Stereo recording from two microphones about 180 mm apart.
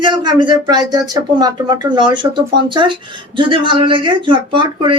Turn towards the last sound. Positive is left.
turn(degrees=-25)  # may be behind; listen again after turning